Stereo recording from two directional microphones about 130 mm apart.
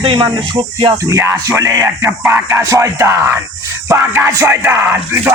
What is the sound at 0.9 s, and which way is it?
Speech, 20° right (ahead or behind).